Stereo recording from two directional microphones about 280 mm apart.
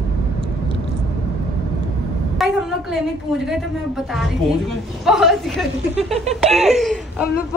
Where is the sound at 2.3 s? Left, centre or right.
Centre.